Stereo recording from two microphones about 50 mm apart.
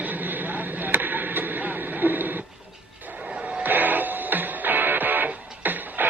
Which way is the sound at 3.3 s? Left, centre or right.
Right.